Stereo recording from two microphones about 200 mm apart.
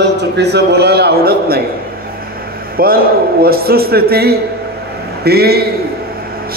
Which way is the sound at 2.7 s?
50° right (ahead or behind).